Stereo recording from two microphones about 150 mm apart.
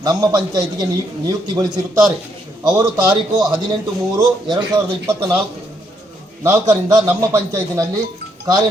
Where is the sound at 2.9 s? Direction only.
25° right (ahead or behind).